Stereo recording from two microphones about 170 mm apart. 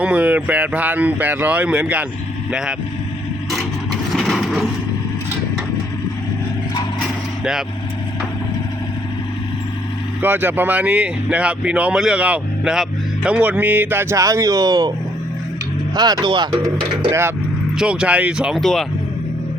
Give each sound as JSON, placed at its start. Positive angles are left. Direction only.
{"t": 0.0, "sound": "speech", "side_deg": -5}
{"t": 4.1, "sound": "vehicle", "side_deg": 0}
{"t": 10.2, "sound": "speech", "side_deg": -10}
{"t": 16.0, "sound": "speech", "side_deg": -25}
{"t": 17.7, "sound": "speech", "side_deg": -5}